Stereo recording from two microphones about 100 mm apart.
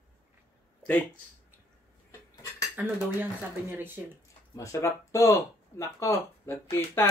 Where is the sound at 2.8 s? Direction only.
15° right (ahead or behind).